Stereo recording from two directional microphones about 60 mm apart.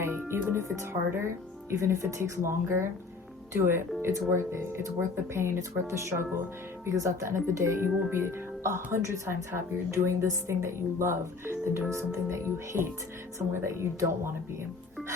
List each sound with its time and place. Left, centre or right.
0.3 s a woman's voice: right